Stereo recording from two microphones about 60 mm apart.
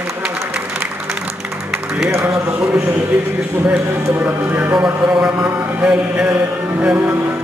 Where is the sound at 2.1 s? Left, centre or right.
Right.